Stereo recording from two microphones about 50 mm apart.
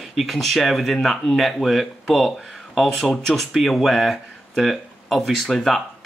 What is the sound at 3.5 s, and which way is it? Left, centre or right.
Speech, centre.